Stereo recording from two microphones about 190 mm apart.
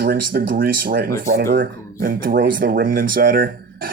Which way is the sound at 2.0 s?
50° right (ahead or behind).